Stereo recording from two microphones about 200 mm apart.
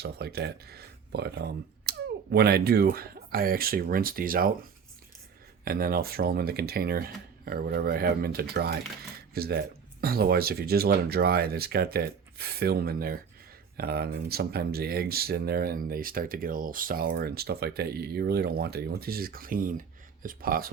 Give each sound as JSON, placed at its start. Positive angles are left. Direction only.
{"t": 0.0, "sound": "speech", "side_deg": -50}
{"t": 5.6, "sound": "speech", "side_deg": -50}